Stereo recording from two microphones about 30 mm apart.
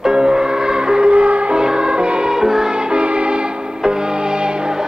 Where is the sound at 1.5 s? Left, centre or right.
Right.